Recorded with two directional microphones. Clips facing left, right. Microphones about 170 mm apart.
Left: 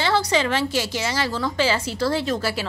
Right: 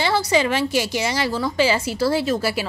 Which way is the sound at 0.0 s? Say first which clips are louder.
Right 2 dB; 10° right (ahead or behind).